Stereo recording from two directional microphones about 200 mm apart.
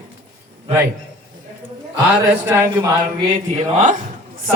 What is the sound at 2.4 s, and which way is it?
Speech, 10° right (ahead or behind).